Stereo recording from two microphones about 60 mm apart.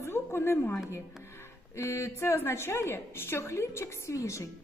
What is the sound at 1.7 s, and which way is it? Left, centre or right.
A woman's voice, left.